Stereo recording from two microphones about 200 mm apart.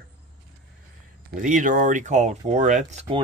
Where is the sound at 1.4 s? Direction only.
40° right (ahead or behind).